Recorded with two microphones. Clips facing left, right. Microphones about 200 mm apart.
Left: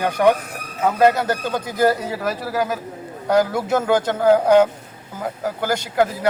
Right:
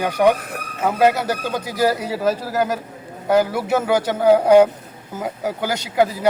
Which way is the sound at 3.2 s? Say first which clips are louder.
Right 1 dB; 5° right (ahead or behind).